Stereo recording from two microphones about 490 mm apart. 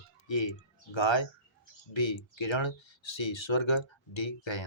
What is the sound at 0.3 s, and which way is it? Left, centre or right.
Speech, left.